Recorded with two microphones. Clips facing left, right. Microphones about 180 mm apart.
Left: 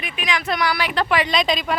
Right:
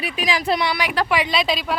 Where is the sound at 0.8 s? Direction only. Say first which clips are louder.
Even; 10° right (ahead or behind).